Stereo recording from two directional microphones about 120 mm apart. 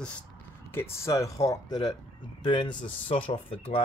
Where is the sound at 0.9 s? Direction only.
25° left (ahead or behind).